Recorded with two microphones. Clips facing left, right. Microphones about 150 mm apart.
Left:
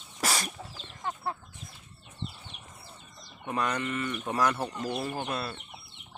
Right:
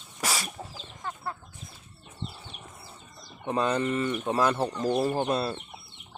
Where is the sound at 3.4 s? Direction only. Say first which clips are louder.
Right 4 dB; 25° right (ahead or behind).